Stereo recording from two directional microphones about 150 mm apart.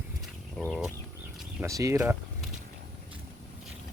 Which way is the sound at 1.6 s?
20° right (ahead or behind).